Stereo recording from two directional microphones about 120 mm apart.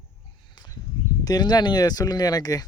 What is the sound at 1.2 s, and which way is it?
Speech, 35° left (ahead or behind).